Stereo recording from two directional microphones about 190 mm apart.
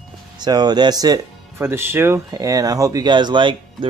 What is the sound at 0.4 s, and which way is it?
Speech, 20° right (ahead or behind).